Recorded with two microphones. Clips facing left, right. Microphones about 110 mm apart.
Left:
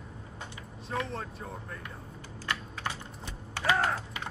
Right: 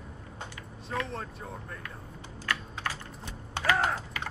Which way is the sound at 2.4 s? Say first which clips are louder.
Right 1 dB; 20° left (ahead or behind).